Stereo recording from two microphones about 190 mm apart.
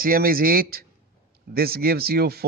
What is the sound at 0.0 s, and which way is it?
Speech, 50° right (ahead or behind).